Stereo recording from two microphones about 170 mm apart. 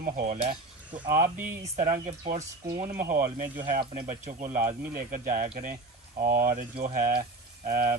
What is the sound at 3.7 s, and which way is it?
Speech, 50° right (ahead or behind).